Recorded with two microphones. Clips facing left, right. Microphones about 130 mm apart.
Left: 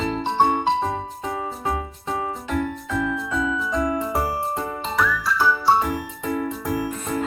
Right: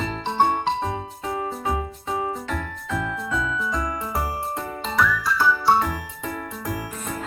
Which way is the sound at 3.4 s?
20° left (ahead or behind).